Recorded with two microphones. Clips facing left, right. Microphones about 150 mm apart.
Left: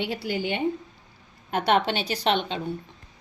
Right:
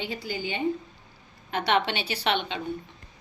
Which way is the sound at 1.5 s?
45° left (ahead or behind).